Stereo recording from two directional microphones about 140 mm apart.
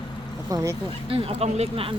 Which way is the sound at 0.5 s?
25° right (ahead or behind).